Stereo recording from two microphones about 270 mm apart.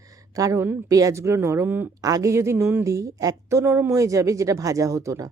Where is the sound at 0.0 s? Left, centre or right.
Centre.